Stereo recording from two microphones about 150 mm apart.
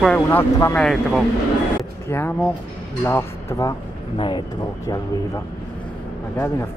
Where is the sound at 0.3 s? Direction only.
15° left (ahead or behind).